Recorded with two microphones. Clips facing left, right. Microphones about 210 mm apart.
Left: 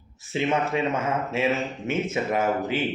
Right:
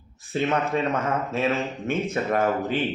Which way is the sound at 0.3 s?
10° left (ahead or behind).